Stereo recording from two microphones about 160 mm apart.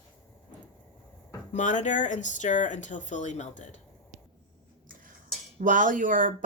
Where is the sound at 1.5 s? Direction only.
50° left (ahead or behind).